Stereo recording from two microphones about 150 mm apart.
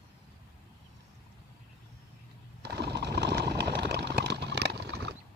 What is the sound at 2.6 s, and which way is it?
Sewing machine, 90° right.